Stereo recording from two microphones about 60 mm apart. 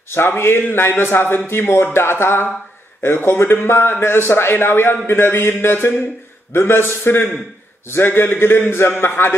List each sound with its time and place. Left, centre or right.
0.4 s a man's voice: left